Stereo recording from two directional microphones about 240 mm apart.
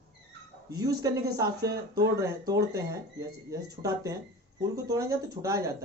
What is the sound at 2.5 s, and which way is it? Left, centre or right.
Speech, centre.